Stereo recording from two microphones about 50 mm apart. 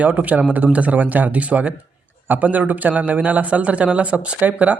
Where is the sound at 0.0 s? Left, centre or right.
Right.